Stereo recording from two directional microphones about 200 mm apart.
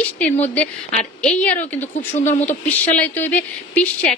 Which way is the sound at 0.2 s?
5° left (ahead or behind).